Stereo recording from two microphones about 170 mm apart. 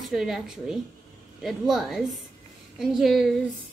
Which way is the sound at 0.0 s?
Centre (ahead or behind).